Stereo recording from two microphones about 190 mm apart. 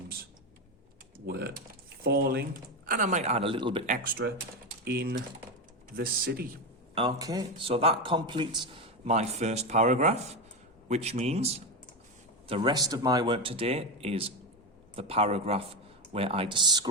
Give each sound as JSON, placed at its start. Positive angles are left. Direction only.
{"t": 1.3, "sound": "a man's voice", "side_deg": -55}
{"t": 4.2, "sound": "speech", "side_deg": -70}
{"t": 4.9, "sound": "speech", "side_deg": -55}
{"t": 6.9, "sound": "speech", "side_deg": -20}
{"t": 7.7, "sound": "a man's voice", "side_deg": -30}